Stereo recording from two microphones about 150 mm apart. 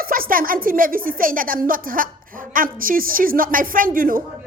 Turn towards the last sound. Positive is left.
turn(degrees=-70)  # may be behind; listen again after turning